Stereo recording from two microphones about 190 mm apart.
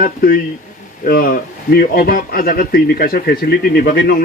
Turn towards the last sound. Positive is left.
turn(degrees=50)  # may be behind; listen again after turning